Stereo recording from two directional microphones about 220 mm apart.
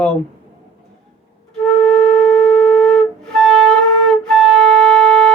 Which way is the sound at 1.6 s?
Centre (ahead or behind).